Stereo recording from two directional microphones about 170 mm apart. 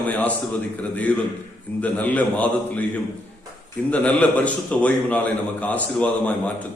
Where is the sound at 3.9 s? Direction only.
10° left (ahead or behind).